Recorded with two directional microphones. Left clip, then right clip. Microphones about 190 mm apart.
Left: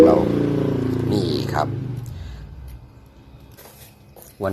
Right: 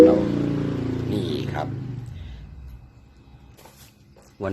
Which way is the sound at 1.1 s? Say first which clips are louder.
Left 5 dB; 15° left (ahead or behind).